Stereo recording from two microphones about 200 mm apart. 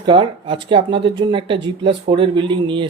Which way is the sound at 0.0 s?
25° right (ahead or behind).